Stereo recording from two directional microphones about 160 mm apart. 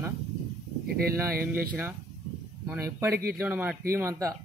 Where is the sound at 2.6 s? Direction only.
15° right (ahead or behind).